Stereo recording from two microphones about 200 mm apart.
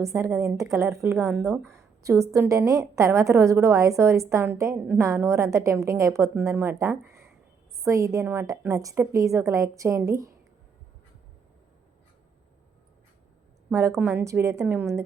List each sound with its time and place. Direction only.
0.0 s a woman's voice: 15° right (ahead or behind)
13.7 s a woman's voice: 15° right (ahead or behind)